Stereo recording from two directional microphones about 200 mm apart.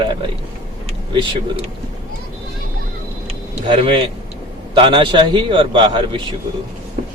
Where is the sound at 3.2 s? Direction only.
25° right (ahead or behind).